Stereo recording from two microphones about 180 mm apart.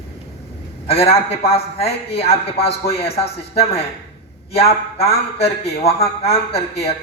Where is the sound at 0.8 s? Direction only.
35° left (ahead or behind).